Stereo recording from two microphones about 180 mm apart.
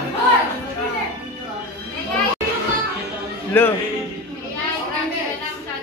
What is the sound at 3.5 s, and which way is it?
Speech, 10° left (ahead or behind).